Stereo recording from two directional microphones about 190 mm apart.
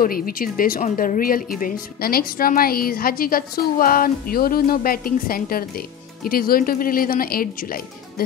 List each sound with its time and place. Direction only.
0.0 s speech: 50° left (ahead or behind)